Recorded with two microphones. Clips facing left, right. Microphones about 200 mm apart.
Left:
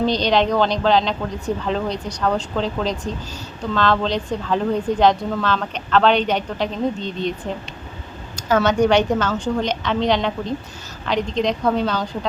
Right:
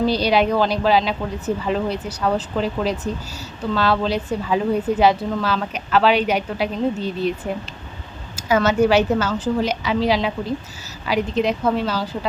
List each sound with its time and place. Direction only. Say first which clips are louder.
0.0 s a woman's voice: even; 5° right (ahead or behind)